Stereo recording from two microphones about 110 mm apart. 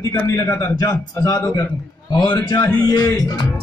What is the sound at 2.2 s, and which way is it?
Speech, 40° left (ahead or behind).